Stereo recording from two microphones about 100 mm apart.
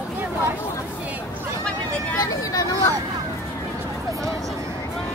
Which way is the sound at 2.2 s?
35° left (ahead or behind).